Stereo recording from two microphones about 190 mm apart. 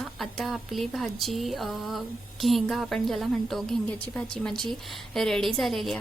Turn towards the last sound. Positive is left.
turn(degrees=0)  # may be behind; listen again after turning